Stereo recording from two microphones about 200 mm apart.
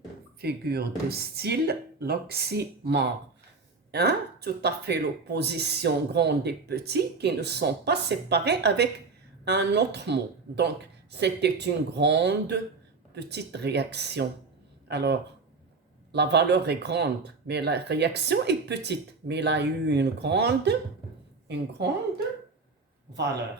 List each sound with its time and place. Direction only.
0.4 s a woman's voice: 55° right (ahead or behind)